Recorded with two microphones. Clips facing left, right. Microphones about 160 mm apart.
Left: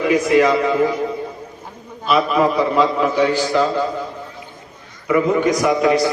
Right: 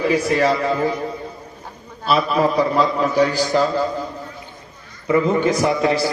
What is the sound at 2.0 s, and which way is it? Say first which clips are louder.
A man's voice: left 2 dB; 35° right (ahead or behind).